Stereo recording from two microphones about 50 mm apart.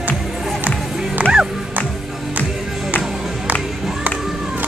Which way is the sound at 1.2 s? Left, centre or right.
Right.